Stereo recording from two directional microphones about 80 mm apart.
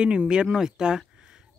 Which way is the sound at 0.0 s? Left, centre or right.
Centre.